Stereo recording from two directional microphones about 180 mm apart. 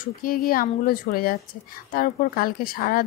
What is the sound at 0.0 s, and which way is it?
Speech, 50° left (ahead or behind).